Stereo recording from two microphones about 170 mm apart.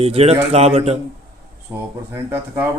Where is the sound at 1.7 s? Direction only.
10° right (ahead or behind).